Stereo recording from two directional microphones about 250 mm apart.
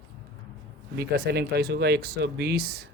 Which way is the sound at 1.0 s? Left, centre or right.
Right.